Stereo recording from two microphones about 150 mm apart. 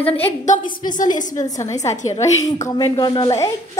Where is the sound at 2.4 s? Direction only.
20° left (ahead or behind).